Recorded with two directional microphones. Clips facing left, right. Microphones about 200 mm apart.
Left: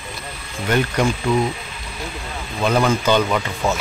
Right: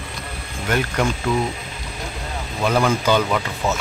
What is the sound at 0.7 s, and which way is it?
Speech, 5° right (ahead or behind).